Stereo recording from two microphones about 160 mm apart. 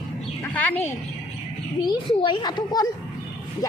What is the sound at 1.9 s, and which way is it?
A child's voice, 30° left (ahead or behind).